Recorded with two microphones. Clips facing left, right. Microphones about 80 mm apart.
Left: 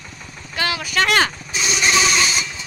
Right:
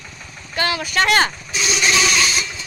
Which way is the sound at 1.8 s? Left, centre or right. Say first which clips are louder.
Left 1 dB; centre.